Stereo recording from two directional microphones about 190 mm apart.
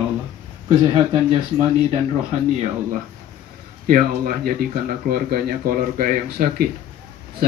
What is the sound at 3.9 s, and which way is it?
A man's voice, 45° right (ahead or behind).